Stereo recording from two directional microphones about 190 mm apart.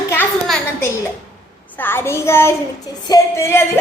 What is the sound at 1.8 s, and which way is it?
A woman's voice, 10° left (ahead or behind).